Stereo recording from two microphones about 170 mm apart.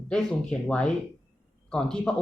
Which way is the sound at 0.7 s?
5° left (ahead or behind).